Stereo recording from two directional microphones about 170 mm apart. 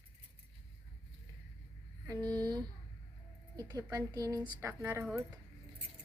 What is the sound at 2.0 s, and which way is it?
A woman's voice, 20° right (ahead or behind).